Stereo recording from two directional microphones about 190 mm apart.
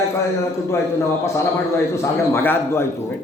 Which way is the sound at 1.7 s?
15° left (ahead or behind).